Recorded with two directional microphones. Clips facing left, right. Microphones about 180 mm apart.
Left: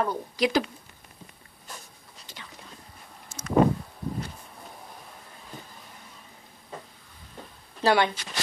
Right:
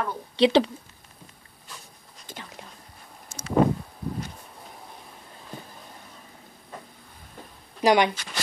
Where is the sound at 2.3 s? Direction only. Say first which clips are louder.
Right 7 dB; 50° right (ahead or behind).